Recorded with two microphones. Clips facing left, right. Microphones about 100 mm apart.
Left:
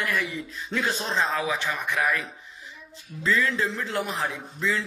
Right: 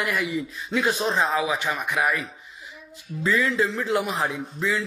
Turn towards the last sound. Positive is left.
turn(degrees=-15)  # may be behind; listen again after turning